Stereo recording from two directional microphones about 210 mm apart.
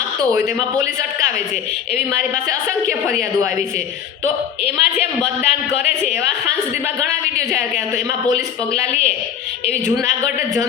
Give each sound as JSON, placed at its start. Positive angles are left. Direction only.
{"t": 4.6, "sound": "a woman's voice", "side_deg": 30}
{"t": 8.8, "sound": "a woman's voice", "side_deg": 30}